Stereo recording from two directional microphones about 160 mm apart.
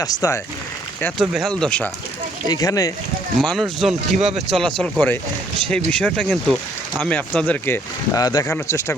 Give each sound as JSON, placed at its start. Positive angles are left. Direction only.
{"t": 0.0, "sound": "speech", "side_deg": 20}
{"t": 1.2, "sound": "speech", "side_deg": 0}
{"t": 2.5, "sound": "speech", "side_deg": 25}
{"t": 3.4, "sound": "speech", "side_deg": 0}
{"t": 8.4, "sound": "speech", "side_deg": 15}